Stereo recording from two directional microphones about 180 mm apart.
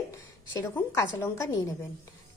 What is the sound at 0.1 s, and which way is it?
A woman's voice, 10° left (ahead or behind).